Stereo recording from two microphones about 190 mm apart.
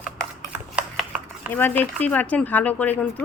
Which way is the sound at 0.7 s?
5° right (ahead or behind).